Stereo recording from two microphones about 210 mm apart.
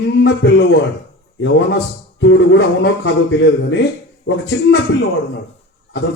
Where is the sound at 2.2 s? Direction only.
60° left (ahead or behind).